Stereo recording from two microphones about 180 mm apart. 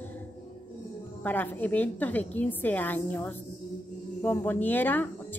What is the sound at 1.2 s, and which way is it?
A woman's voice, 10° left (ahead or behind).